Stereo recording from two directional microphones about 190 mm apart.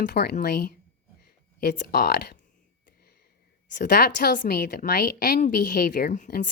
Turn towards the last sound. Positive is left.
turn(degrees=40)  # may be behind; listen again after turning